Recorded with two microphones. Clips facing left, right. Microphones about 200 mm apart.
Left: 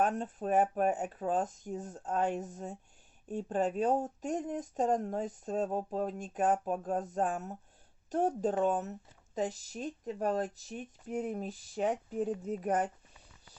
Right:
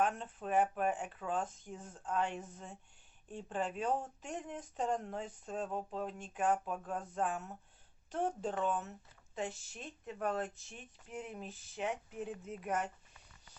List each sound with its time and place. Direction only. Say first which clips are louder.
0.0 s speech: left 4 dB; 40° left (ahead or behind)